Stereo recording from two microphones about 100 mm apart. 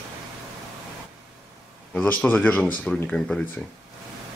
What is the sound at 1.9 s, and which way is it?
Speech, 10° left (ahead or behind).